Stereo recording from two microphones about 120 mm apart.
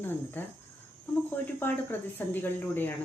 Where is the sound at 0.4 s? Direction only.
15° left (ahead or behind).